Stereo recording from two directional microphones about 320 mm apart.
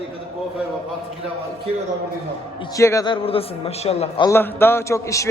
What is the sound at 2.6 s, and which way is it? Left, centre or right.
A man's voice, centre.